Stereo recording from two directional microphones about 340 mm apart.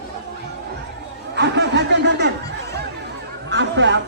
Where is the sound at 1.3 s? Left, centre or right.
Right.